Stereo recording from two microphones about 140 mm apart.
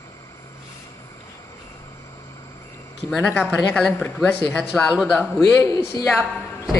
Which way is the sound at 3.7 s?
5° left (ahead or behind).